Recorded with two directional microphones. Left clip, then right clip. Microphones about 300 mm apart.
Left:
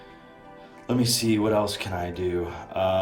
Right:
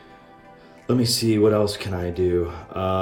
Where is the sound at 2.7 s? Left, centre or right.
Right.